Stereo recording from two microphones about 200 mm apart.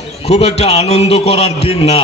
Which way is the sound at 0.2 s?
30° left (ahead or behind).